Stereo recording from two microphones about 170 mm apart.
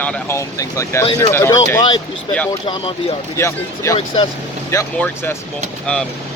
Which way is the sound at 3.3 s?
15° left (ahead or behind).